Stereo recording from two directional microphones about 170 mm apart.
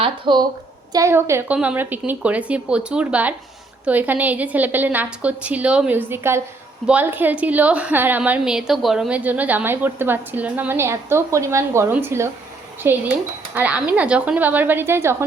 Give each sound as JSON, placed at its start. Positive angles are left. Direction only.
{"t": 0.0, "sound": "a woman's voice", "side_deg": -25}
{"t": 0.9, "sound": "a woman's voice", "side_deg": -15}